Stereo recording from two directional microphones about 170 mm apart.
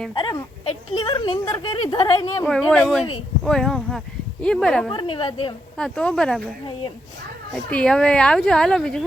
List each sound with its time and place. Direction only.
0.1 s speech: 25° left (ahead or behind)
2.5 s speech: centre (ahead or behind)
4.9 s speech: 30° left (ahead or behind)
5.7 s speech: 5° left (ahead or behind)
7.5 s speech: 5° left (ahead or behind)